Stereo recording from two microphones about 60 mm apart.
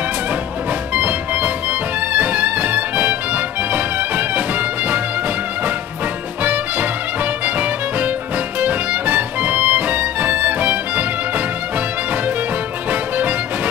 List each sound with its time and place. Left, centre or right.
0.9 s music: right
6.4 s music: right